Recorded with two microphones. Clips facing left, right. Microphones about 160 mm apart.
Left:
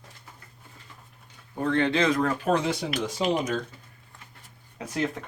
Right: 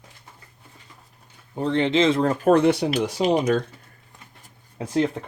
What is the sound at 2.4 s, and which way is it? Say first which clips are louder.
Speech: right 8 dB; 60° right (ahead or behind).